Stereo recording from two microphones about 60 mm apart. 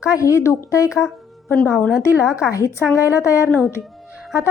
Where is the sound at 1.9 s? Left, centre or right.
Centre.